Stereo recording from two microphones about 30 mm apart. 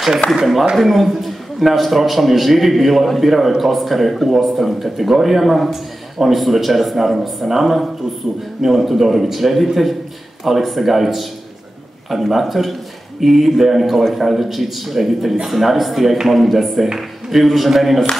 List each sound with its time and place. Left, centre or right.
0.7 s a man's voice: centre